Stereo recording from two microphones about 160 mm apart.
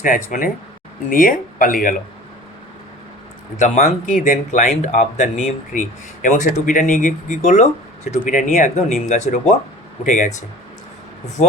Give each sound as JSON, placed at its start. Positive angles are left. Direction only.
{"t": 0.0, "sound": "speech", "side_deg": 55}
{"t": 3.6, "sound": "speech", "side_deg": 50}